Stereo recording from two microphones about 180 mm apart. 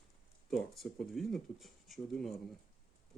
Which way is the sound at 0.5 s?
Centre (ahead or behind).